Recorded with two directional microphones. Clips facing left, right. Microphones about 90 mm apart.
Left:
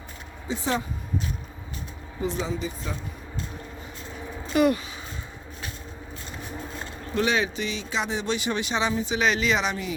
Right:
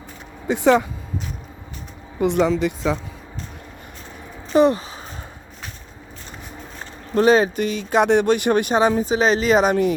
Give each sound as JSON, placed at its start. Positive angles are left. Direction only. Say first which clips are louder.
{"t": 0.4, "sound": "speech", "louder": "right 11 dB", "side_deg": -65}
{"t": 2.2, "sound": "speech", "louder": "right 11 dB", "side_deg": -65}
{"t": 4.5, "sound": "speech", "louder": "right 6 dB", "side_deg": -30}
{"t": 7.1, "sound": "speech", "louder": "right 9 dB", "side_deg": -40}